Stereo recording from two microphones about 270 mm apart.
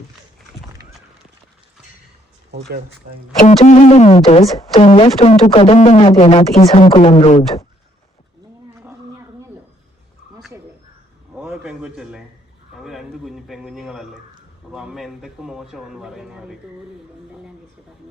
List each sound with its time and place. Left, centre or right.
2.5 s speech: right
3.3 s speech: left
8.7 s wild animals: centre
11.3 s a man's voice: centre